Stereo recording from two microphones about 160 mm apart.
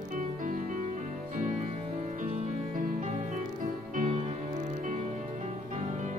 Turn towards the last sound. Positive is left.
turn(degrees=-50)  # may be behind; listen again after turning